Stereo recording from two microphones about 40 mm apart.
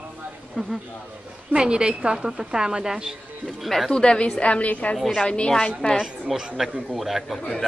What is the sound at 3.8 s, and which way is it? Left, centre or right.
A woman's voice, left.